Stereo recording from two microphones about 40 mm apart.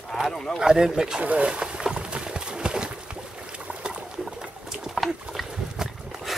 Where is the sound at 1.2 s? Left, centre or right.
Right.